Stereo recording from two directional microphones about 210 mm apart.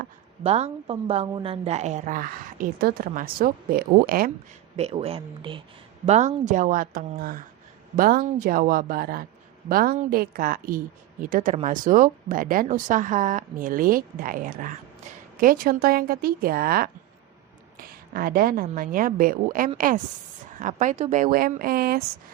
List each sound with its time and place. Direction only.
0.4 s speech: 30° right (ahead or behind)
4.8 s speech: 30° right (ahead or behind)
6.1 s speech: 35° right (ahead or behind)